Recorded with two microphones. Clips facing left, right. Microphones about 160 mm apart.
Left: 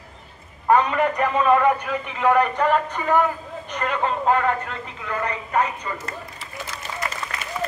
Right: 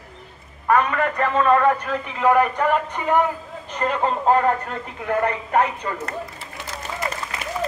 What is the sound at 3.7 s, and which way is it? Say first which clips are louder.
Speech: right 2 dB; 35° right (ahead or behind).